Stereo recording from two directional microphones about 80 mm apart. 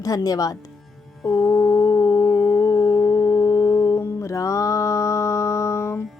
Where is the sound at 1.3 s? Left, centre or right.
Left.